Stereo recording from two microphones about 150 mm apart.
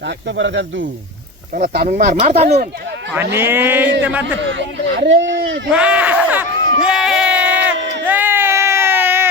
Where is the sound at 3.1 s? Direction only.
15° right (ahead or behind).